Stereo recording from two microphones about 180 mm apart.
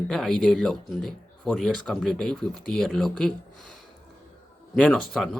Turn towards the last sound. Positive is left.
turn(degrees=0)  # may be behind; listen again after turning